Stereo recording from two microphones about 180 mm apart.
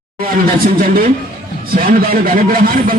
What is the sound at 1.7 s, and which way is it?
A man's voice, 50° right (ahead or behind).